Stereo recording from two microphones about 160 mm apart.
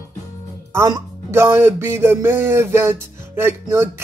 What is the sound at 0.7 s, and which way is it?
Speech, 15° right (ahead or behind).